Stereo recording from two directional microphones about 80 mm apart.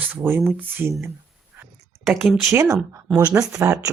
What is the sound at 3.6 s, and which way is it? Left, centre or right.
Speech, right.